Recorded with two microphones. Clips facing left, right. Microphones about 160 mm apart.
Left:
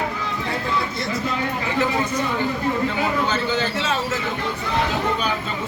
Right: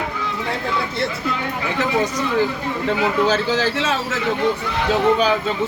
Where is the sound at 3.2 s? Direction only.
90° right.